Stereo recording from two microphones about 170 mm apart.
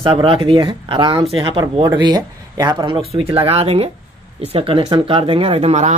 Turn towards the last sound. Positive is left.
turn(degrees=-40)  # may be behind; listen again after turning